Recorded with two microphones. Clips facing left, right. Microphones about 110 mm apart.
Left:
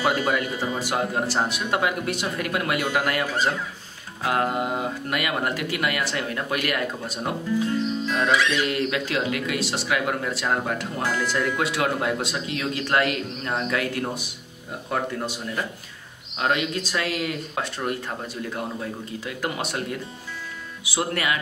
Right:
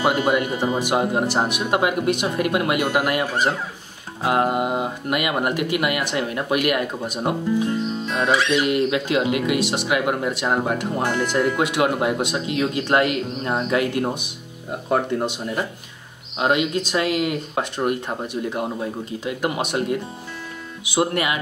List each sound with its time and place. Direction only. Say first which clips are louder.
0.0 s speech: right 4 dB; 15° right (ahead or behind)